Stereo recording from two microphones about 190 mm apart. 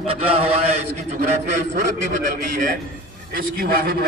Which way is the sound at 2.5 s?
45° right (ahead or behind).